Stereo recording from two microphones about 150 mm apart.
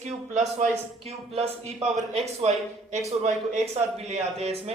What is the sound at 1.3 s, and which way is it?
A man's voice, 40° right (ahead or behind).